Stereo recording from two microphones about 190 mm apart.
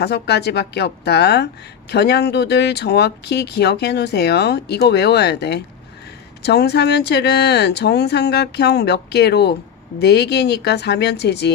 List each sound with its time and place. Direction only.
0.0 s speech: 60° left (ahead or behind)